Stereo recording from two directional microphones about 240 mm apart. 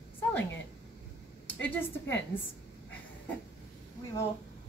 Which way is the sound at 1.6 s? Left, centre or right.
Centre.